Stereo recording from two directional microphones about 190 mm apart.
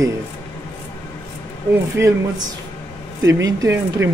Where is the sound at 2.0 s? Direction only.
15° right (ahead or behind).